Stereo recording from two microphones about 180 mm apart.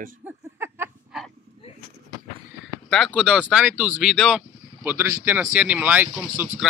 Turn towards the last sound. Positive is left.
turn(degrees=-10)  # may be behind; listen again after turning